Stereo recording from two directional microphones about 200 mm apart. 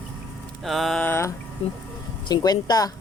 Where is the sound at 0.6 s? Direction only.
Centre (ahead or behind).